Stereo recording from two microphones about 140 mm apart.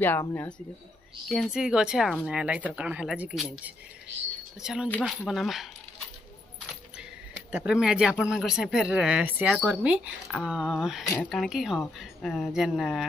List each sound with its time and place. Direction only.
0.2 s speech: 20° left (ahead or behind)
1.3 s speech: centre (ahead or behind)
7.5 s speech: 5° right (ahead or behind)